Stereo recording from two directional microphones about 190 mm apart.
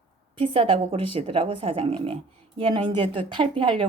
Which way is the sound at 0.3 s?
30° right (ahead or behind).